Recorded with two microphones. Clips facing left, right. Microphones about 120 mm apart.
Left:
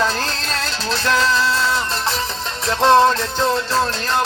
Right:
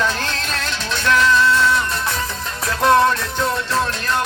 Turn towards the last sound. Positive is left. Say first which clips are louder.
# left 2 dB
turn(degrees=25)  # may be behind; listen again after turning